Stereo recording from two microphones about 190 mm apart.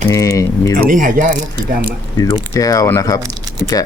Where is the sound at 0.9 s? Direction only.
45° right (ahead or behind).